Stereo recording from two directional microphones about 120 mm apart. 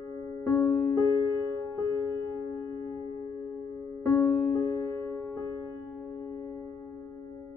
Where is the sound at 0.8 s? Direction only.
25° left (ahead or behind).